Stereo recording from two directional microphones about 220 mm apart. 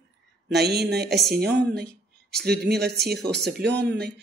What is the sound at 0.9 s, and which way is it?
A woman's voice, 45° right (ahead or behind).